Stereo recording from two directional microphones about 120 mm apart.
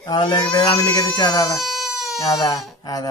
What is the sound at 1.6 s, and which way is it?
Baby cry, centre (ahead or behind).